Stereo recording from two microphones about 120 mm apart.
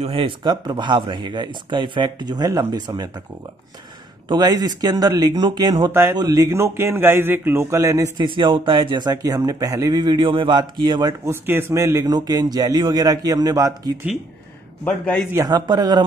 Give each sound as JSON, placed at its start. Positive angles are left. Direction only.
{"t": 0.0, "sound": "speech", "side_deg": -45}
{"t": 4.3, "sound": "a man's voice", "side_deg": -35}
{"t": 8.2, "sound": "speech", "side_deg": -40}
{"t": 11.4, "sound": "speech", "side_deg": -20}
{"t": 14.9, "sound": "a man's voice", "side_deg": 10}
{"t": 15.3, "sound": "speech", "side_deg": -35}